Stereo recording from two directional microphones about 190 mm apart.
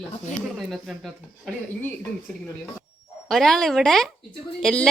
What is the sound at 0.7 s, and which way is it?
A woman's voice, centre (ahead or behind).